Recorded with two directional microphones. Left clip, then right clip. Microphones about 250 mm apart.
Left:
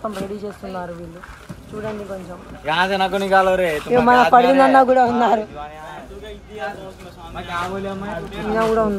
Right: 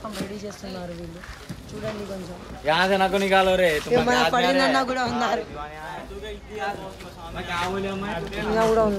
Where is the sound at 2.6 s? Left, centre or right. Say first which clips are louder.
Left 2 dB; left.